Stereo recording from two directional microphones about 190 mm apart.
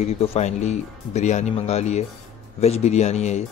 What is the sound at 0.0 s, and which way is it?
Speech, 35° left (ahead or behind).